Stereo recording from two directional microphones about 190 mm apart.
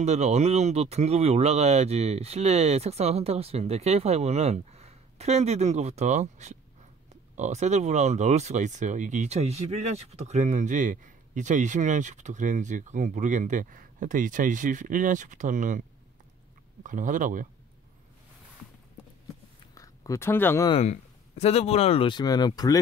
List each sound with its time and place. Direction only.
0.0 s speech: 35° right (ahead or behind)
16.8 s speech: 45° right (ahead or behind)
19.7 s a sound: 15° left (ahead or behind)
20.6 s speech: 30° left (ahead or behind)